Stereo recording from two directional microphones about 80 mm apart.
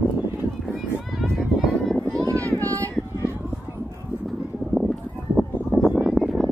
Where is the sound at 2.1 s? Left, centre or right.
Right.